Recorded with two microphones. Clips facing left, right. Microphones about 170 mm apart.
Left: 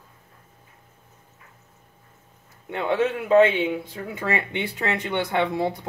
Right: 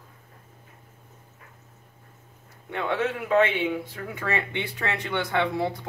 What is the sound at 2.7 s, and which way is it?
Speech, 25° left (ahead or behind).